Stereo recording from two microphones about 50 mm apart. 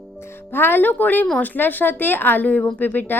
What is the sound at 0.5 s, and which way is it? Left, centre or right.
Speech, left.